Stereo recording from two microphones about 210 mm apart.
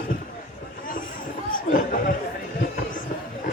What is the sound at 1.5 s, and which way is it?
Speech, 40° left (ahead or behind).